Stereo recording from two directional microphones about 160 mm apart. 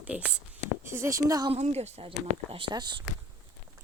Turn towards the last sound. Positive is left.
turn(degrees=-30)  # may be behind; listen again after turning